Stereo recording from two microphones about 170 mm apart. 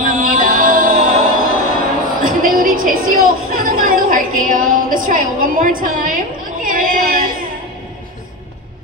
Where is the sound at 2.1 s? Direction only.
55° right (ahead or behind).